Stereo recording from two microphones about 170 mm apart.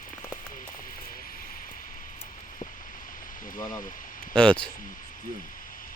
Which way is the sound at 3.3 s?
55° left (ahead or behind).